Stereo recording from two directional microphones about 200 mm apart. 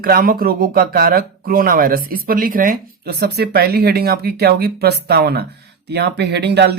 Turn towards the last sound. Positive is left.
turn(degrees=-55)  # may be behind; listen again after turning